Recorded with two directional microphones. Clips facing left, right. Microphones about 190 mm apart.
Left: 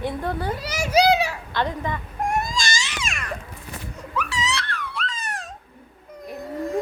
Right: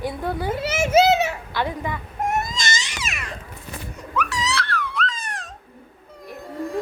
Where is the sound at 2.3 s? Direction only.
20° right (ahead or behind).